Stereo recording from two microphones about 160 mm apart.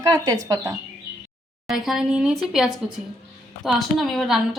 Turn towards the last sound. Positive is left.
turn(degrees=0)  # may be behind; listen again after turning